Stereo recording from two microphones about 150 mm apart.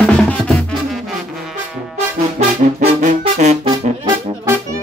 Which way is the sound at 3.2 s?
50° right (ahead or behind).